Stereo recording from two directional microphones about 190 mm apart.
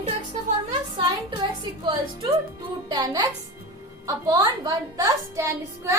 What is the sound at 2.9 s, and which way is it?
A woman's voice, 20° right (ahead or behind).